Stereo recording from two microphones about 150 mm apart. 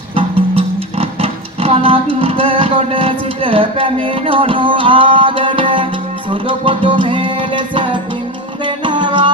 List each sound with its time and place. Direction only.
0.1 s music: 40° right (ahead or behind)